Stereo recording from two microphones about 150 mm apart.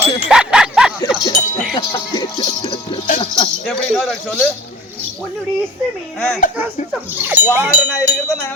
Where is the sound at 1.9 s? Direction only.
25° left (ahead or behind).